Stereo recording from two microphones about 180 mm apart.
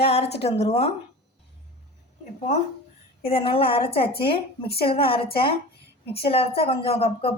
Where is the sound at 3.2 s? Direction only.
30° left (ahead or behind).